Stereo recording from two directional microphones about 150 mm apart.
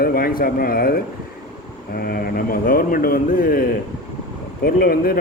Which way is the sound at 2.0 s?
90° left.